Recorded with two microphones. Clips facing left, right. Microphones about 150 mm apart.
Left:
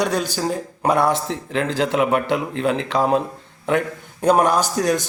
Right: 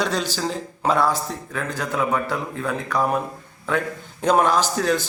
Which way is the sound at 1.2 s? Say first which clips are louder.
Left 6 dB; 90° left.